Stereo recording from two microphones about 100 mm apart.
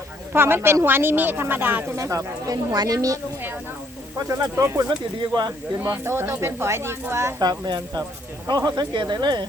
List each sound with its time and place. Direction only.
0.3 s speech: 25° right (ahead or behind)
2.0 s speech: 35° right (ahead or behind)
4.3 s speech: 30° right (ahead or behind)
4.9 s speech: 45° right (ahead or behind)
5.5 s speech: 25° right (ahead or behind)
7.6 s speech: 45° right (ahead or behind)